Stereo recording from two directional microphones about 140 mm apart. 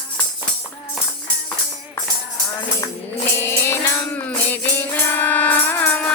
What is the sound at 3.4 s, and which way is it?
Music, 15° left (ahead or behind).